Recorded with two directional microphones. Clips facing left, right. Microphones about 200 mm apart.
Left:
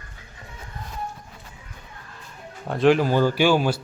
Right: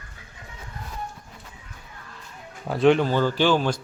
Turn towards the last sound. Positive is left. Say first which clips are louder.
# left 2 dB
turn(degrees=10)  # may be behind; listen again after turning